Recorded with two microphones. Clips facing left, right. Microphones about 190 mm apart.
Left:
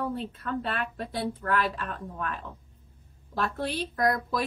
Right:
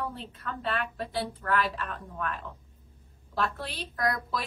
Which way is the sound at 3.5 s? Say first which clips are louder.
Left 7 dB; 50° left (ahead or behind).